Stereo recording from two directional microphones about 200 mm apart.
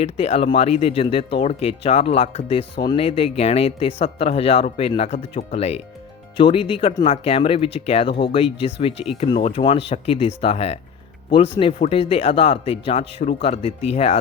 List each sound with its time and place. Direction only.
0.0 s speech: 30° left (ahead or behind)